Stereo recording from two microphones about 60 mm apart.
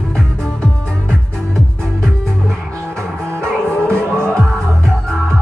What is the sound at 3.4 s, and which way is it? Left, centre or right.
Music, centre.